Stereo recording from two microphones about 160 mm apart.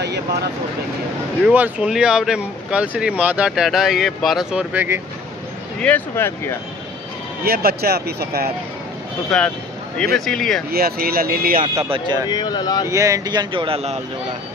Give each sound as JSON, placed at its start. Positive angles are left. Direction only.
{"t": 1.4, "sound": "speech", "side_deg": -10}
{"t": 5.8, "sound": "speech", "side_deg": 10}
{"t": 7.4, "sound": "speech", "side_deg": -70}
{"t": 10.1, "sound": "speech", "side_deg": 0}
{"t": 10.7, "sound": "speech", "side_deg": -70}
{"t": 11.6, "sound": "speech", "side_deg": -30}
{"t": 12.3, "sound": "speech", "side_deg": 25}
{"t": 12.8, "sound": "speech", "side_deg": -20}